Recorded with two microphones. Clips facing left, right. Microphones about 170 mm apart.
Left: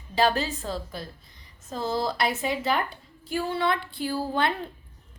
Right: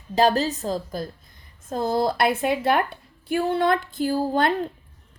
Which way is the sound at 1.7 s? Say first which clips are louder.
Right 5 dB; 50° right (ahead or behind).